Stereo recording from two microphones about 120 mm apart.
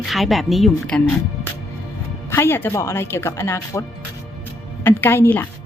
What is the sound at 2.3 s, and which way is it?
A woman's voice, 20° left (ahead or behind).